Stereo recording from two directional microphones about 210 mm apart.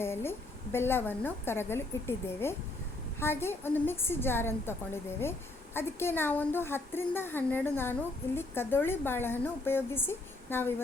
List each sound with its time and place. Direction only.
0.0 s a woman's voice: 10° left (ahead or behind)
5.7 s a woman's voice: 10° left (ahead or behind)